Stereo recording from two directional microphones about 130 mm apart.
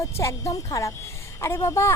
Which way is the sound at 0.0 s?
25° left (ahead or behind).